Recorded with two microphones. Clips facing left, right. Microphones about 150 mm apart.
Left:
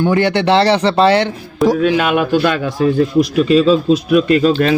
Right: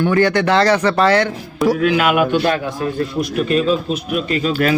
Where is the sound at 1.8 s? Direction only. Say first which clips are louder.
Left 2 dB; 30° left (ahead or behind).